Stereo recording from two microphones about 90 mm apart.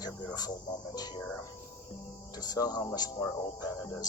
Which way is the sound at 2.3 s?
45° left (ahead or behind).